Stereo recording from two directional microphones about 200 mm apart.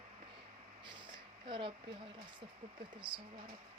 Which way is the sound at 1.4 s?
25° right (ahead or behind).